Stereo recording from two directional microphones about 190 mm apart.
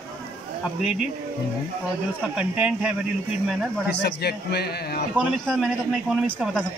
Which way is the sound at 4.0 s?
60° left (ahead or behind).